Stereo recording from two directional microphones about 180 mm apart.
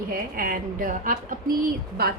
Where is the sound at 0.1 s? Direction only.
55° right (ahead or behind).